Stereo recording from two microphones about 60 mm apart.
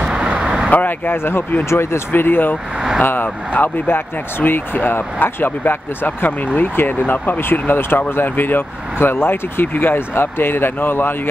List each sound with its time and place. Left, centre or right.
0.0 s vehicle: centre
0.7 s speech: left